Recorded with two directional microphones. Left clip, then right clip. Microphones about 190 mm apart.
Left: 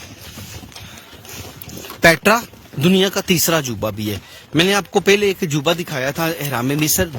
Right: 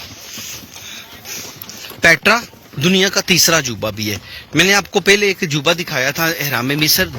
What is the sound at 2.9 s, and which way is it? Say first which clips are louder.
Speech: right 4 dB; 20° left (ahead or behind).